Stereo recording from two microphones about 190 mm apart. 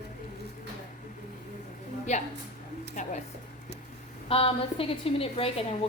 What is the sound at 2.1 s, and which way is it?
A woman's voice, 35° left (ahead or behind).